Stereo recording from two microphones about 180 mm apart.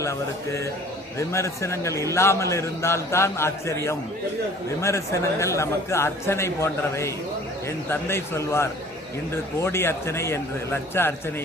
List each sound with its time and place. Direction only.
0.0 s a man's voice: 15° left (ahead or behind)